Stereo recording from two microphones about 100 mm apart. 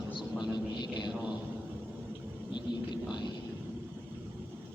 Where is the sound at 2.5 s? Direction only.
45° left (ahead or behind).